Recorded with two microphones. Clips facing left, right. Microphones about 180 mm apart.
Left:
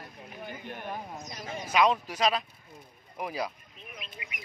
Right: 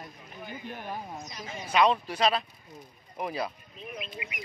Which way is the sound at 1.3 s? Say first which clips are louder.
Left 2 dB; 55° left (ahead or behind).